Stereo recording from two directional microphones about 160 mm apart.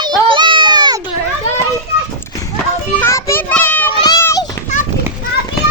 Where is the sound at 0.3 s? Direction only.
30° right (ahead or behind).